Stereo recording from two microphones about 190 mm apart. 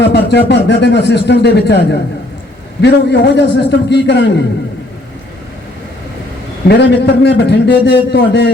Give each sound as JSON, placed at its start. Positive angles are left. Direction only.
{"t": 0.0, "sound": "speech", "side_deg": 65}
{"t": 6.7, "sound": "speech", "side_deg": 65}